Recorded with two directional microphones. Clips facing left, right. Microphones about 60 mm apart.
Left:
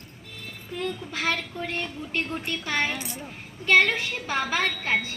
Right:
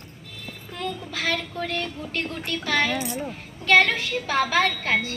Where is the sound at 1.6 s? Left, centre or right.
Centre.